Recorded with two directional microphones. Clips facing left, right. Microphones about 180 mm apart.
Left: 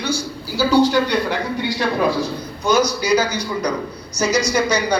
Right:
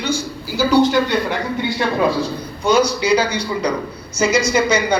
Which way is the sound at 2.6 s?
30° right (ahead or behind).